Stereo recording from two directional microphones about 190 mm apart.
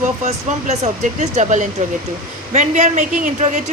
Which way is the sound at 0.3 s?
35° right (ahead or behind).